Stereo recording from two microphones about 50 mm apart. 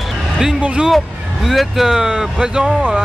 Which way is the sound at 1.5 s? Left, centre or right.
Centre.